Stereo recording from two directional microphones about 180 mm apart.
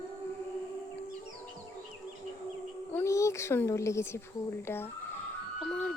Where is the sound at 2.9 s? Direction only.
15° left (ahead or behind).